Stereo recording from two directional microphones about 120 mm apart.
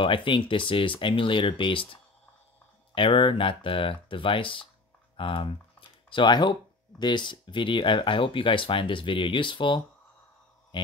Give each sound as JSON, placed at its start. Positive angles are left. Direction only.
{"t": 0.0, "sound": "speech", "side_deg": 45}
{"t": 5.1, "sound": "typing", "side_deg": 45}
{"t": 7.0, "sound": "speech", "side_deg": 40}
{"t": 10.7, "sound": "mantra", "side_deg": 40}